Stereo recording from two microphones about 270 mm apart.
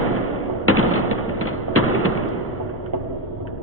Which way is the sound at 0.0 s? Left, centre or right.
Left.